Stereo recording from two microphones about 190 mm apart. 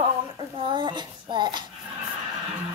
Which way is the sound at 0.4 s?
25° right (ahead or behind).